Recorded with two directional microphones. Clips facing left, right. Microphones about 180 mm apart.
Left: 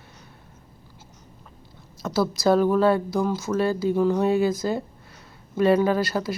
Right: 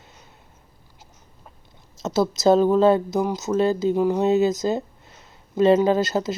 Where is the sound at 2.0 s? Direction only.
20° right (ahead or behind).